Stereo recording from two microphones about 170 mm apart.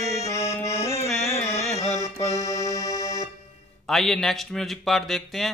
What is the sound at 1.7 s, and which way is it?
Music, 40° left (ahead or behind).